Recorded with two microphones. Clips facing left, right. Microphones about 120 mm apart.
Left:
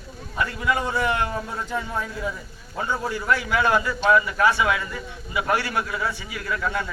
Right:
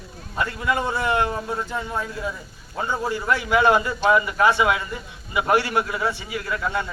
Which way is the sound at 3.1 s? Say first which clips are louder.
Right 2 dB; 25° right (ahead or behind).